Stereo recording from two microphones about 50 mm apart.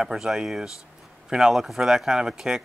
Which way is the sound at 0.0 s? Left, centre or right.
Centre.